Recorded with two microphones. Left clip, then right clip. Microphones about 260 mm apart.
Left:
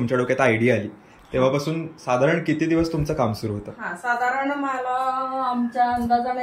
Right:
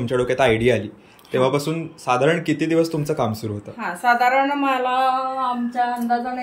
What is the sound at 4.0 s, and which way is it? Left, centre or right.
Speech, right.